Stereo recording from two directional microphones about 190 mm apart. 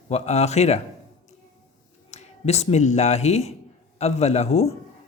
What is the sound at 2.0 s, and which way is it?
A man's voice, 35° left (ahead or behind).